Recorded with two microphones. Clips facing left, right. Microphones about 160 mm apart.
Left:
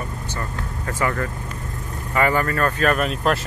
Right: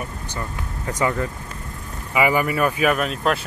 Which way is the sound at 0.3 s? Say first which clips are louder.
Left 1 dB; 15° right (ahead or behind).